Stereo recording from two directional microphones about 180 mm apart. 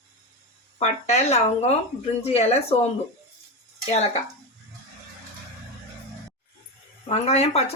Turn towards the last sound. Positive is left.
turn(degrees=35)  # may be behind; listen again after turning